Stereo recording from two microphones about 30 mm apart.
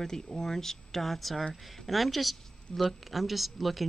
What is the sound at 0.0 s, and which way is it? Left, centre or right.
A woman's voice, centre.